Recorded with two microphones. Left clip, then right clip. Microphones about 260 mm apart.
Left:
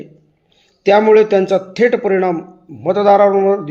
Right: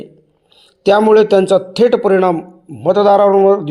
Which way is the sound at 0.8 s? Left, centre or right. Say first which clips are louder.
Even; right.